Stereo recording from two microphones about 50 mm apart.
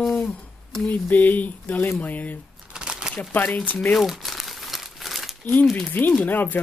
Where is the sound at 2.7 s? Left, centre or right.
Centre.